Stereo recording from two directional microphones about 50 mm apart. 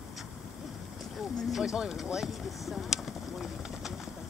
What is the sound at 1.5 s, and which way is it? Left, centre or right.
Speech, centre.